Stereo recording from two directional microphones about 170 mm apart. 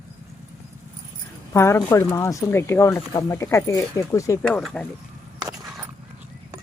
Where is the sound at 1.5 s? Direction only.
15° left (ahead or behind).